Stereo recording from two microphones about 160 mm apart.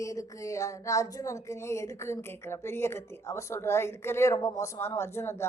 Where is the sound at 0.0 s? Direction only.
20° left (ahead or behind).